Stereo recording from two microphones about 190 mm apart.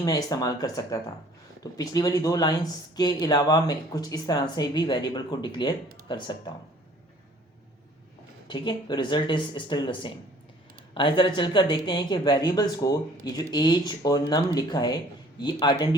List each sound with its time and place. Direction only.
0.0 s speech: 20° left (ahead or behind)
8.4 s speech: 25° left (ahead or behind)